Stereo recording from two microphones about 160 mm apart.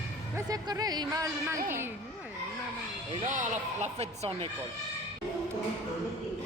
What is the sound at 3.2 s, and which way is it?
Speech, 50° right (ahead or behind).